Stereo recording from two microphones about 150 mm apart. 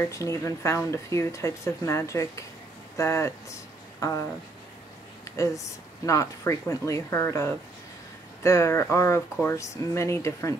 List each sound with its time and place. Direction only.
0.0 s speech: 20° left (ahead or behind)
5.2 s a sound: 20° left (ahead or behind)
6.0 s speech: 20° left (ahead or behind)